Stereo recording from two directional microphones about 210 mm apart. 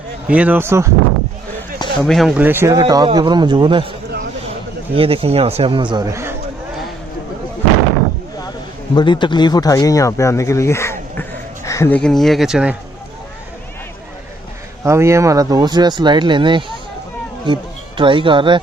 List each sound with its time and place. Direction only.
0.3 s a man's voice: 5° right (ahead or behind)
2.0 s a man's voice: centre (ahead or behind); by 3.8 s 20° right (ahead or behind)
4.9 s speech: 25° right (ahead or behind)
9.0 s speech: 20° left (ahead or behind); by 12.7 s 5° right (ahead or behind)
14.8 s speech: 15° right (ahead or behind)